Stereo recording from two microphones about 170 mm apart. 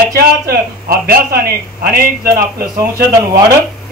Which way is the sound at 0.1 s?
65° right (ahead or behind).